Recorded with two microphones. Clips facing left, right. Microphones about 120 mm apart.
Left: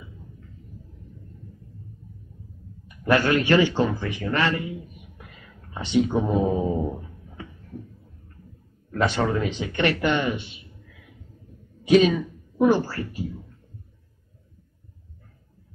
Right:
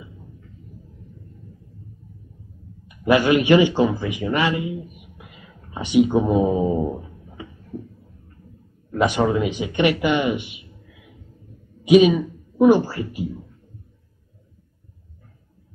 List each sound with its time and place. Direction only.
3.0 s speech: 15° right (ahead or behind)
5.1 s a sound: 15° right (ahead or behind)
8.9 s speech: 15° right (ahead or behind)
11.8 s speech: 15° right (ahead or behind)